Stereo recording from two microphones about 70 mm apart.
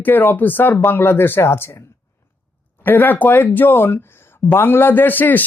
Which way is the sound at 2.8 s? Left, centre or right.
Left.